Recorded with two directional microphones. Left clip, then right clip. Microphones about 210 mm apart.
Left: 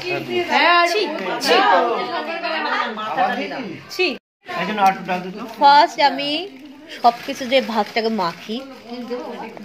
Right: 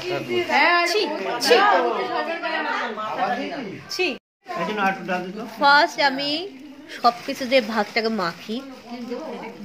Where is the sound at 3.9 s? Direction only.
Centre (ahead or behind).